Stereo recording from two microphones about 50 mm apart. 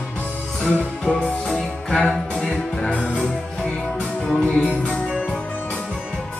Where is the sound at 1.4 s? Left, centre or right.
Centre.